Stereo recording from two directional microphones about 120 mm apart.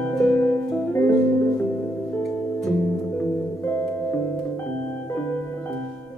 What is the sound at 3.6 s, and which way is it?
Music, 20° left (ahead or behind).